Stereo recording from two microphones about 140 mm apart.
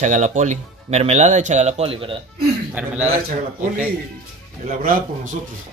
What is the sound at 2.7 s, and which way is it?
Speech, 10° right (ahead or behind).